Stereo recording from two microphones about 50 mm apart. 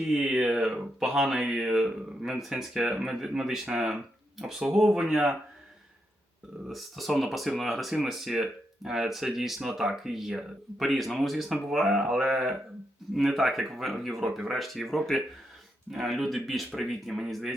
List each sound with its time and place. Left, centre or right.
0.1 s speech: centre
6.7 s speech: centre